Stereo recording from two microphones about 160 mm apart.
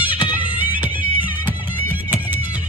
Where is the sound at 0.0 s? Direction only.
30° left (ahead or behind).